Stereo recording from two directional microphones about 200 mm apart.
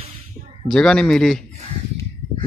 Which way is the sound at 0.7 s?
5° left (ahead or behind).